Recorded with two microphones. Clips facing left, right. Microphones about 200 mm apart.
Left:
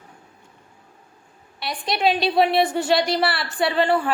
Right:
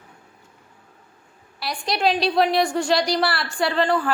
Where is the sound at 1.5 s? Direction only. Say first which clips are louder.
Even; centre (ahead or behind).